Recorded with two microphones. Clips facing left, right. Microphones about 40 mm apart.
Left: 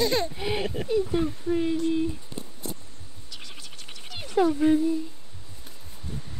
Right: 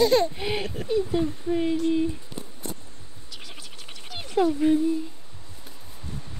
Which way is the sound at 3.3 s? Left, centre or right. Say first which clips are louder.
Right 1 dB; centre.